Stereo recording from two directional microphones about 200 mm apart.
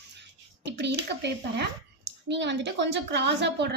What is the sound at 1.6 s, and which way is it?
Speech, 60° right (ahead or behind).